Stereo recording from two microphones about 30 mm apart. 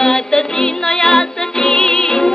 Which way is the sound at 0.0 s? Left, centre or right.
Left.